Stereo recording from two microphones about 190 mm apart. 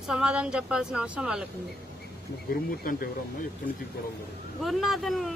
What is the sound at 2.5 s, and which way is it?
Speech, 50° left (ahead or behind).